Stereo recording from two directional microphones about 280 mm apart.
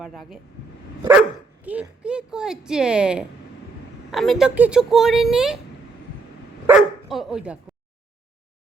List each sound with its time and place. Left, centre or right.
0.0 s speech: centre
1.6 s speech: centre
6.7 s speech: centre